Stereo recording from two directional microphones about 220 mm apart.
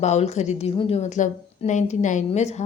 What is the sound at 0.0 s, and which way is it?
A woman's voice, 30° left (ahead or behind).